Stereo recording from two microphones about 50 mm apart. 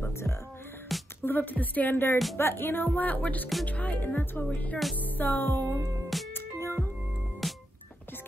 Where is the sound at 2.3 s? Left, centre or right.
Left.